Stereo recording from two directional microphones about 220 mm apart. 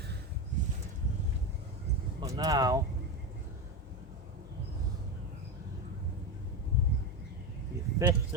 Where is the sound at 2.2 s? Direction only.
20° right (ahead or behind).